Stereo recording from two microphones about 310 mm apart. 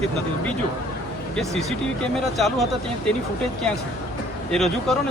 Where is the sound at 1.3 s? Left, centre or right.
Centre.